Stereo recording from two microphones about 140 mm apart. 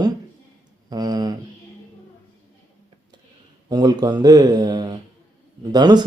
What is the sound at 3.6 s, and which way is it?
Speech, 30° right (ahead or behind).